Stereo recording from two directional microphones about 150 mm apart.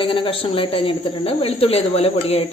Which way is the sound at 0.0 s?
35° left (ahead or behind).